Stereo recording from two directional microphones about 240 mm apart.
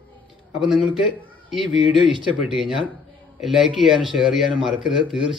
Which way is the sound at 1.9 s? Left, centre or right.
Centre.